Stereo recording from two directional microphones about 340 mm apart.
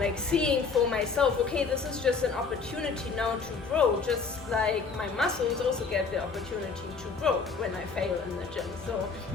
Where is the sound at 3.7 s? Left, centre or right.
Centre.